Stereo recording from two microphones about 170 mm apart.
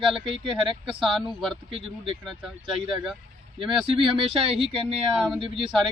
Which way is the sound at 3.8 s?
30° right (ahead or behind).